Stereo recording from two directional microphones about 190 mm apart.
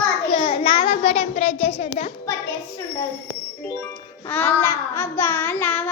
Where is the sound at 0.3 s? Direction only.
25° left (ahead or behind).